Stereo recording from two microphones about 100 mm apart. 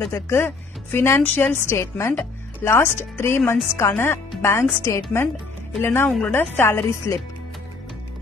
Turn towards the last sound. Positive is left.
turn(degrees=25)  # may be behind; listen again after turning